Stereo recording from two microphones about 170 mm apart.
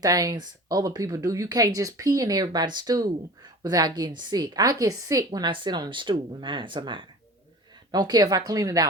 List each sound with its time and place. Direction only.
0.0 s a woman's voice: 20° right (ahead or behind)